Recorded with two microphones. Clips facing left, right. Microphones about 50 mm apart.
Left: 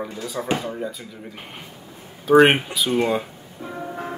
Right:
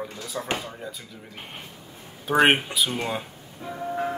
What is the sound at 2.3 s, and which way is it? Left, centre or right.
Speech, centre.